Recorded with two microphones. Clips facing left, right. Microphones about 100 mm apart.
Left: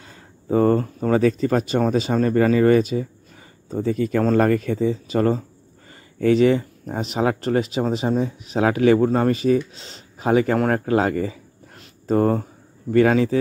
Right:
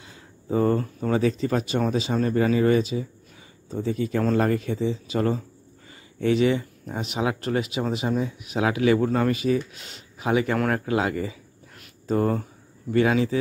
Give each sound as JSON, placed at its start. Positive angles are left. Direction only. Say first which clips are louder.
{"t": 0.0, "sound": "speech", "louder": "left 2 dB", "side_deg": 45}
{"t": 11.7, "sound": "a sound", "louder": "left 5 dB", "side_deg": 35}
{"t": 12.9, "sound": "speech", "louder": "left 4 dB", "side_deg": 45}